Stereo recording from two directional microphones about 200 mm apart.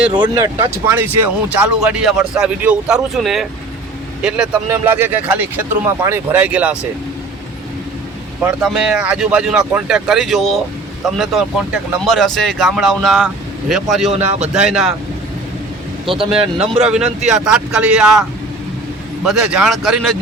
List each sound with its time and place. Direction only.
0.1 s speech: 20° right (ahead or behind)
8.4 s speech: 5° right (ahead or behind)
14.1 s a man's voice: 35° right (ahead or behind)
16.0 s a man's voice: 25° right (ahead or behind)
16.8 s speech: 5° right (ahead or behind)